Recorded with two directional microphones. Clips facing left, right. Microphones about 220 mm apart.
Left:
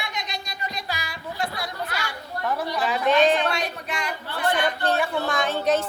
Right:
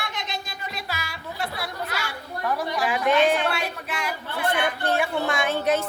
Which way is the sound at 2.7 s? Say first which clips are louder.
Left 1 dB; 10° right (ahead or behind).